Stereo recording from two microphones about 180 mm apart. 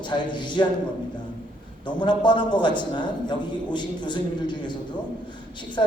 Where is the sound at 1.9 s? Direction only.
25° left (ahead or behind).